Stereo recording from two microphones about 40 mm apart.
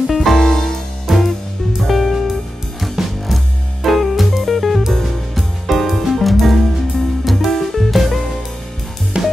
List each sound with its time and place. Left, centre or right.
0.1 s music: centre
1.1 s music: centre
9.1 s music: right